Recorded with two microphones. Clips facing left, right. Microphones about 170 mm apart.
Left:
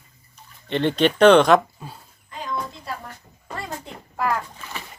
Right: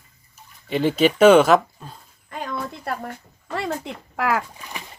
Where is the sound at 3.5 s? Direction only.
75° right (ahead or behind).